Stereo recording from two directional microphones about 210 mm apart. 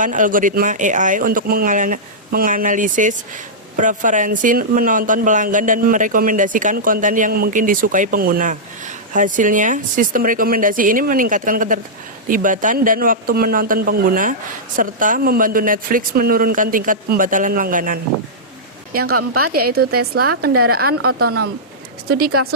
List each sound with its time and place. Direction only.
0.0 s speech: 40° right (ahead or behind)
18.9 s a woman's voice: 90° right
22.0 s speech: 45° right (ahead or behind)